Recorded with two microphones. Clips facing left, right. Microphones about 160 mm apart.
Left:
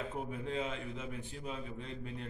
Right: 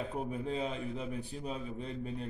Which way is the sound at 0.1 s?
35° right (ahead or behind).